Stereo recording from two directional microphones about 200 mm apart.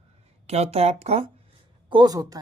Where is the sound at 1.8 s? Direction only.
20° right (ahead or behind).